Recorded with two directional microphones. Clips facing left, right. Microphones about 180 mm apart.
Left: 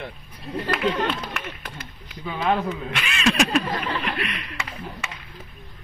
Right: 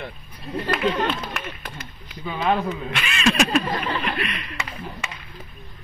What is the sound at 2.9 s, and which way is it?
Speech, 10° left (ahead or behind).